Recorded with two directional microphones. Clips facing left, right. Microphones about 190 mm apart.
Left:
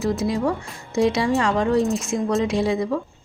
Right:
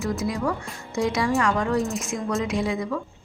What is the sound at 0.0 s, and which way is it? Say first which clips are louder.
A woman's voice: left 4 dB; 30° left (ahead or behind).